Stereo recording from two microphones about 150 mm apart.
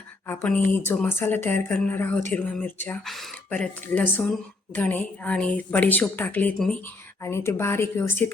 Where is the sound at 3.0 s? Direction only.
Centre (ahead or behind).